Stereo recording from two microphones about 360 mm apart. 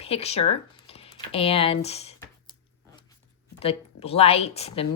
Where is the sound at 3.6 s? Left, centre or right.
Centre.